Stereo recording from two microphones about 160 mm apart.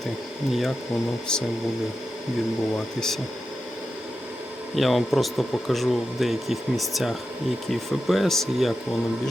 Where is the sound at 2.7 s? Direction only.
5° left (ahead or behind).